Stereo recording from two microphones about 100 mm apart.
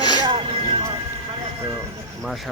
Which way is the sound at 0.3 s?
60° right (ahead or behind).